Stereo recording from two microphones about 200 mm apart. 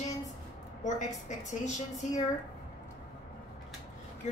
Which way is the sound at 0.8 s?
35° left (ahead or behind).